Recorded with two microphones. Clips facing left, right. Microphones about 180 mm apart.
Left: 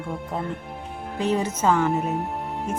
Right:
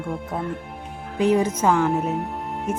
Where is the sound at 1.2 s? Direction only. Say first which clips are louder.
Right 4 dB; 10° right (ahead or behind).